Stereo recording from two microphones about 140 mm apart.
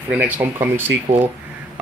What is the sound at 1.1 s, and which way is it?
Speech, 45° right (ahead or behind).